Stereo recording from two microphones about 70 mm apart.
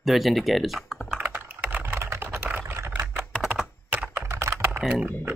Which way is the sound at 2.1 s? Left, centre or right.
Right.